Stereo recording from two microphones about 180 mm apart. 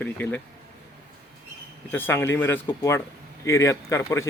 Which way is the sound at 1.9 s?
10° left (ahead or behind).